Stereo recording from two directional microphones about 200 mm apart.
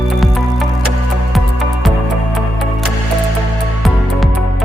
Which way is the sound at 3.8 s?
Centre (ahead or behind).